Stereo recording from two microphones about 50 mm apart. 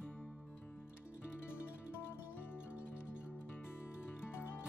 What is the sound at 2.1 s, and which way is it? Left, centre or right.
Music, left.